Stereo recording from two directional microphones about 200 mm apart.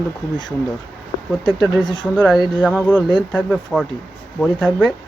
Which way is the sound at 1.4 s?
20° left (ahead or behind).